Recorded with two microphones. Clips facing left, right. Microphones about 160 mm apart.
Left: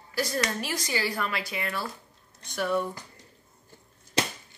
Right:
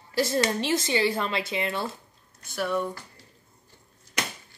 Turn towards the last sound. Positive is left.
turn(degrees=30)  # may be behind; listen again after turning